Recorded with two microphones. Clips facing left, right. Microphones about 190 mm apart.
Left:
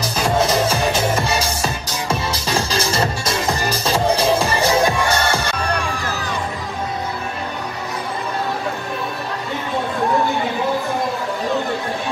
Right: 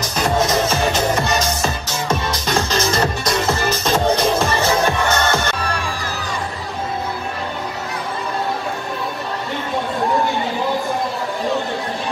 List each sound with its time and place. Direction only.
1.1 s music: 10° left (ahead or behind)
2.0 s music: 30° left (ahead or behind)
3.4 s music: 15° left (ahead or behind)
4.1 s music: 35° left (ahead or behind)
4.8 s music: 10° left (ahead or behind)